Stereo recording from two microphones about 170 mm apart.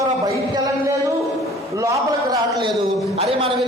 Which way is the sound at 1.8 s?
20° right (ahead or behind).